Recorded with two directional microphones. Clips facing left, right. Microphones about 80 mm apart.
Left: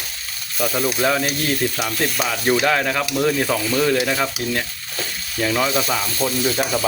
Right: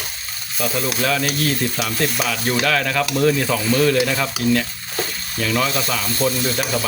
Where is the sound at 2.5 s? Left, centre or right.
Centre.